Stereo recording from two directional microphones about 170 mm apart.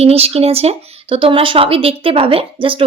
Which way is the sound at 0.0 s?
35° right (ahead or behind).